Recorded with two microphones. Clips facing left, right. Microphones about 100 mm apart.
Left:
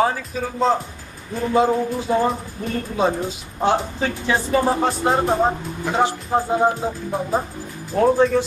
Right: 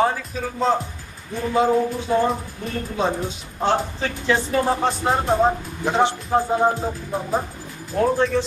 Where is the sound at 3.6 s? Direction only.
10° left (ahead or behind).